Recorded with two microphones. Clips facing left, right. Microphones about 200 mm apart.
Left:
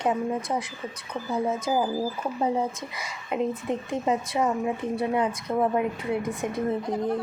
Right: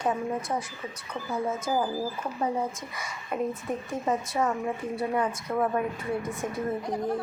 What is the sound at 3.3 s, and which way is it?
Speech, 20° left (ahead or behind).